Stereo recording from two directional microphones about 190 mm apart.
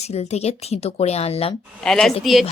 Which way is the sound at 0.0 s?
35° left (ahead or behind).